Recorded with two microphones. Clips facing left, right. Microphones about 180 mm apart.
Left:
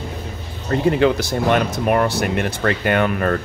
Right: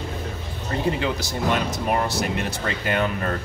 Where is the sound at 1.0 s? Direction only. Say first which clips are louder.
Left 8 dB; 60° left (ahead or behind).